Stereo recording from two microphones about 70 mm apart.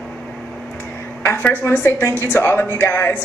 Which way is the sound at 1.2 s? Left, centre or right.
Left.